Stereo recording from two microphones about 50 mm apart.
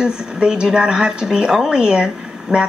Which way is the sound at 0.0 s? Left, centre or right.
Centre.